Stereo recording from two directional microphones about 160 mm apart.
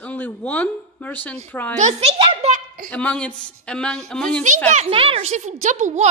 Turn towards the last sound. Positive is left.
turn(degrees=-45)  # may be behind; listen again after turning